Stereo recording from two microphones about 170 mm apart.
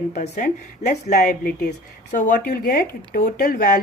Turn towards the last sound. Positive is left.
turn(degrees=55)  # may be behind; listen again after turning